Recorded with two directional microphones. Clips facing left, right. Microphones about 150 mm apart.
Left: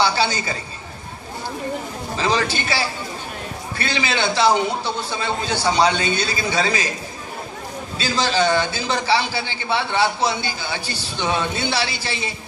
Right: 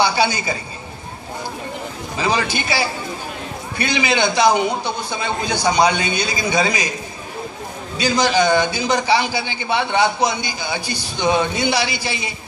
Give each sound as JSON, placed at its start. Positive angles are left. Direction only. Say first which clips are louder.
{"t": 0.0, "sound": "a woman's voice", "louder": "right 2 dB", "side_deg": -15}
{"t": 2.1, "sound": "a man's voice", "louder": "right 1 dB", "side_deg": -15}
{"t": 8.0, "sound": "a man's voice", "louder": "right 3 dB", "side_deg": -15}